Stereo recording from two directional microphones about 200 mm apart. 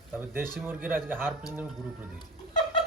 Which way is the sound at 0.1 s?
10° right (ahead or behind).